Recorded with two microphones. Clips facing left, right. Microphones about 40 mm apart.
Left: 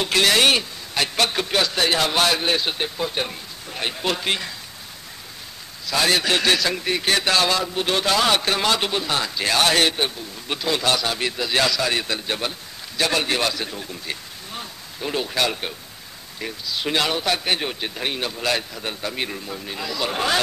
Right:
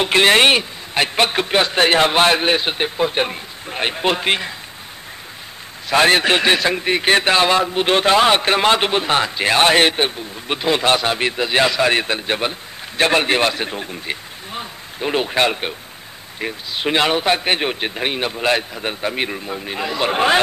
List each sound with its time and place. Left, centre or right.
0.0 s a man's voice: right
5.9 s a man's voice: right